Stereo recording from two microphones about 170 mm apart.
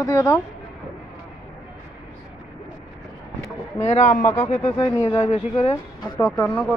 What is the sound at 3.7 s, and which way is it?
Speech, 40° left (ahead or behind).